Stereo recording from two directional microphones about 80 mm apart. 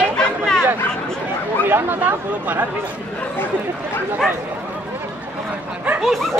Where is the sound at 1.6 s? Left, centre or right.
Right.